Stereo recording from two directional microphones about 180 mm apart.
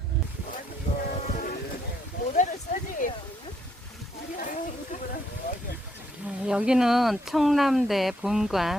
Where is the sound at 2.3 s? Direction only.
45° left (ahead or behind).